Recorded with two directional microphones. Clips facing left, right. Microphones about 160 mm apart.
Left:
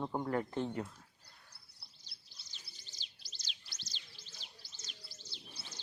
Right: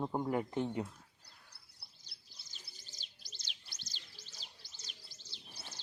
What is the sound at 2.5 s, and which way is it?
Bird, 45° right (ahead or behind).